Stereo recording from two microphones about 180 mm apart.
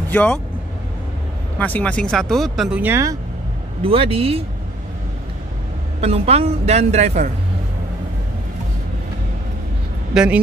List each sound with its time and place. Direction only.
0.1 s speech: 5° left (ahead or behind)
1.6 s speech: 10° left (ahead or behind); by 3.2 s 15° right (ahead or behind)
3.8 s a woman's voice: 30° right (ahead or behind)
5.9 s a woman's voice: 35° right (ahead or behind)
10.1 s speech: 5° right (ahead or behind)